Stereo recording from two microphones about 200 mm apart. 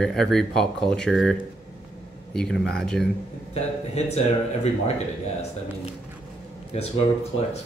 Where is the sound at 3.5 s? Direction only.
35° left (ahead or behind).